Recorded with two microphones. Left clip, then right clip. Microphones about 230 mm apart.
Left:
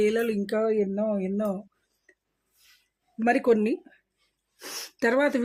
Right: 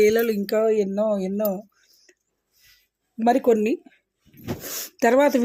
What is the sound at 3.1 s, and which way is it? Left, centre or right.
Speech, right.